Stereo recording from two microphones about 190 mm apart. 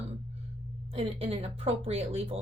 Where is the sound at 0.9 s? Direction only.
30° right (ahead or behind).